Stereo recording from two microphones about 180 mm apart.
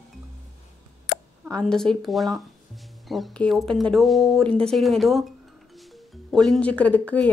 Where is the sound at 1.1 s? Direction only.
75° left (ahead or behind).